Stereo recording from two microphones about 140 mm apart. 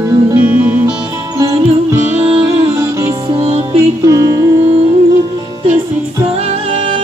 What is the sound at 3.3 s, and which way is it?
Music, 50° right (ahead or behind).